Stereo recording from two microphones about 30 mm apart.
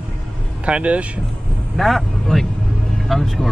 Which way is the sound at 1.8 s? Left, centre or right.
Centre.